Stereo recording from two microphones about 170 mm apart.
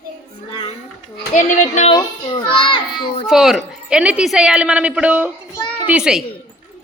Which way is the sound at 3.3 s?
5° right (ahead or behind).